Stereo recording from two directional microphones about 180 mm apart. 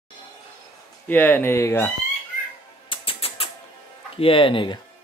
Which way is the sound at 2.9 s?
30° left (ahead or behind).